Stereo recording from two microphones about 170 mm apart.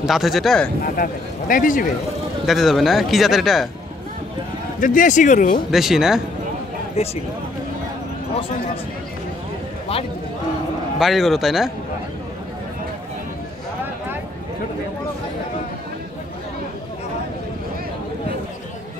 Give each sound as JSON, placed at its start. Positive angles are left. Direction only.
{"t": 0.0, "sound": "speech", "side_deg": 0}
{"t": 0.9, "sound": "speech", "side_deg": 55}
{"t": 2.4, "sound": "speech", "side_deg": 0}
{"t": 4.7, "sound": "speech", "side_deg": 50}
{"t": 5.7, "sound": "speech", "side_deg": 0}
{"t": 7.0, "sound": "speech", "side_deg": 35}
{"t": 11.0, "sound": "speech", "side_deg": 0}